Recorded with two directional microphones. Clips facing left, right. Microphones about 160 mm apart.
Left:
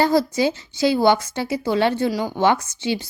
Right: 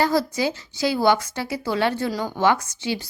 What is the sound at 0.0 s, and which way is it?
Speech, 25° left (ahead or behind).